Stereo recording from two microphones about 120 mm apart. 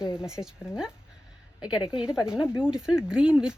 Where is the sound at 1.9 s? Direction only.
5° right (ahead or behind).